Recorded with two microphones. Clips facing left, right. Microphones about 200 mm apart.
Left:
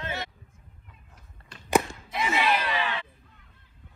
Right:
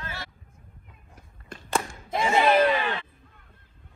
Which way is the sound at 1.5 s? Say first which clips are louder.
Left 5 dB; 50° right (ahead or behind).